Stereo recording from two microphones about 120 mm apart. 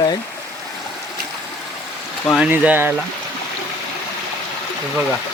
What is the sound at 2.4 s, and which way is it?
Speech, 15° right (ahead or behind).